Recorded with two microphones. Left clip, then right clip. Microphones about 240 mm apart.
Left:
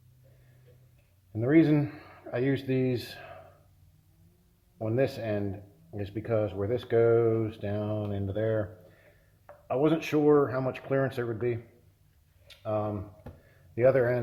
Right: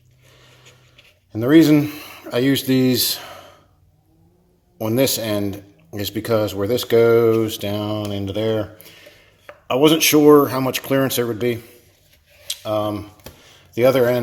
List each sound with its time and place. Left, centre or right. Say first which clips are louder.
1.3 s speech: right 10 dB; right
4.8 s a man's voice: right 10 dB; right
9.6 s a man's voice: right 12 dB; right
12.5 s a sound: right 10 dB; right
13.7 s a man's voice: right 8 dB; right